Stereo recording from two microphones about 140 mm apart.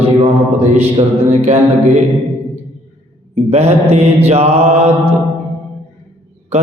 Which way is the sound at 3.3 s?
45° right (ahead or behind).